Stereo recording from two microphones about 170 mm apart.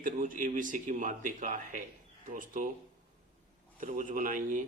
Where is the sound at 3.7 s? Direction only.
50° right (ahead or behind).